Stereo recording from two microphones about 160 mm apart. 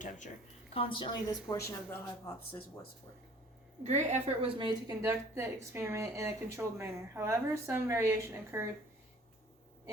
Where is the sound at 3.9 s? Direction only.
45° right (ahead or behind).